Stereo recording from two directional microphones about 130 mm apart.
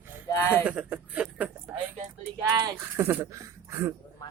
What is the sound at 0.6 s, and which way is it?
Speech, 10° right (ahead or behind).